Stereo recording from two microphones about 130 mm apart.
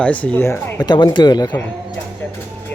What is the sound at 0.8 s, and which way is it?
Speech, 30° left (ahead or behind).